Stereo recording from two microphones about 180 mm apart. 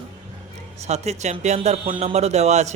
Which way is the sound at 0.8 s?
40° right (ahead or behind).